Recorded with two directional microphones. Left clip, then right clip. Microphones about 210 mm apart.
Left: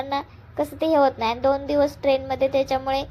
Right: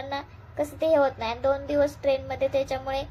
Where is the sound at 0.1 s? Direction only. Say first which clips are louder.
Left 6 dB; 20° left (ahead or behind).